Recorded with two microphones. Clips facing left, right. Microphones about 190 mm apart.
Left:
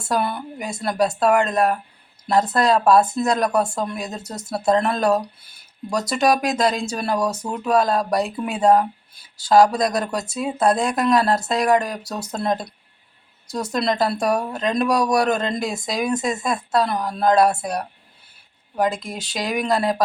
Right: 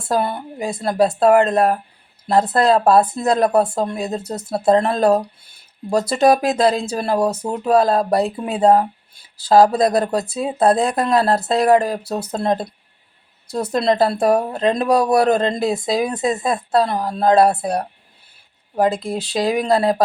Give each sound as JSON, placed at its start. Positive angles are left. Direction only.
{"t": 0.1, "sound": "speech", "side_deg": -30}